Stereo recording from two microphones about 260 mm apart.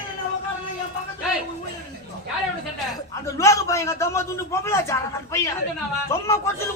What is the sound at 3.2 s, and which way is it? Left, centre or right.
A man's voice, centre.